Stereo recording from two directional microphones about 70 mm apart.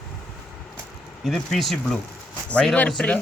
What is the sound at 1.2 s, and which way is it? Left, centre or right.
Speech, centre.